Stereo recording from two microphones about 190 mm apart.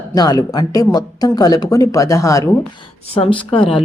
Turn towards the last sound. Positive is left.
turn(degrees=30)  # may be behind; listen again after turning